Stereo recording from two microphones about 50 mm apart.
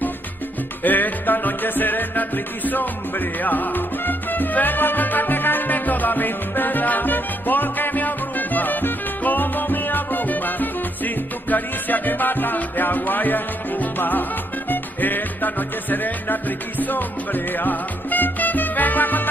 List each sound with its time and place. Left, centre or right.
0.8 s music: left